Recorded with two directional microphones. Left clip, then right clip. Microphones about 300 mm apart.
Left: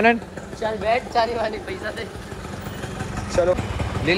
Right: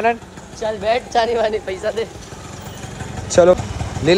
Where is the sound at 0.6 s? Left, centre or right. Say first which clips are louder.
Right 3 dB; right.